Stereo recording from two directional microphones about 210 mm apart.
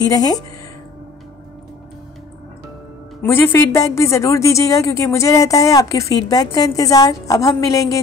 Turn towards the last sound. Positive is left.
turn(degrees=15)  # may be behind; listen again after turning